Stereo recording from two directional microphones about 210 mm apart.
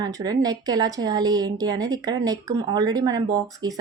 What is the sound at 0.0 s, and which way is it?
Speech, 15° right (ahead or behind).